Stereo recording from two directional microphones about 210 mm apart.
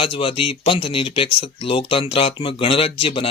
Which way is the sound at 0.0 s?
25° left (ahead or behind).